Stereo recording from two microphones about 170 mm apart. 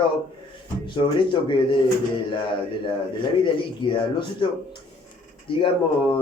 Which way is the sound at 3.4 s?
30° left (ahead or behind).